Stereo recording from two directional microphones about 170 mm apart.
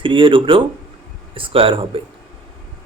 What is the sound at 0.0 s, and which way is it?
Speech, 30° right (ahead or behind).